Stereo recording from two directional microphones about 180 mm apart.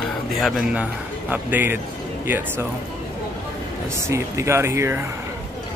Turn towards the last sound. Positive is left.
turn(degrees=-15)  # may be behind; listen again after turning